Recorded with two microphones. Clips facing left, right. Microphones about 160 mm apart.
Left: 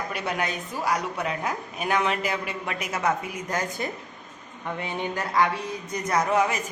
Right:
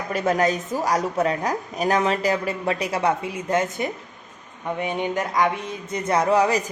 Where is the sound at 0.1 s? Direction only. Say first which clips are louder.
Right 13 dB; 45° right (ahead or behind); by 3.9 s 20° right (ahead or behind).